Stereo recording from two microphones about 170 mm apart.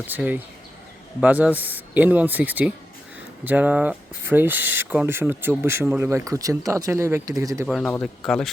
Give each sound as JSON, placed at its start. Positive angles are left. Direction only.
{"t": 0.1, "sound": "speech", "side_deg": -10}
{"t": 7.7, "sound": "speech", "side_deg": 0}